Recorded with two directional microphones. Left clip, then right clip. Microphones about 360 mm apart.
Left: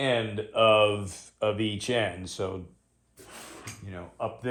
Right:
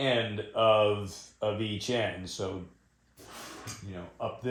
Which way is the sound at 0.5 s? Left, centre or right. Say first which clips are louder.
Left 3 dB; left.